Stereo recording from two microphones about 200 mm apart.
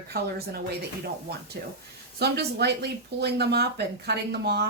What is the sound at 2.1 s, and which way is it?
Speech, 55° right (ahead or behind).